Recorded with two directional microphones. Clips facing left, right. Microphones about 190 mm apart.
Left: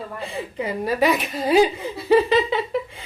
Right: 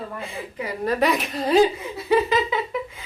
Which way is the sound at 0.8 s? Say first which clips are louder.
Even; 5° left (ahead or behind).